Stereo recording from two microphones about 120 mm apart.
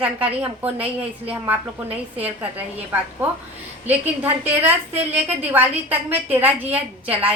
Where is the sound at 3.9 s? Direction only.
15° right (ahead or behind).